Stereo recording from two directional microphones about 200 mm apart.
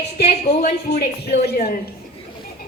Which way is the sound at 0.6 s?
45° left (ahead or behind).